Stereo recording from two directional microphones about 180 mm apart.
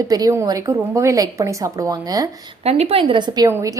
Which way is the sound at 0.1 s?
20° right (ahead or behind).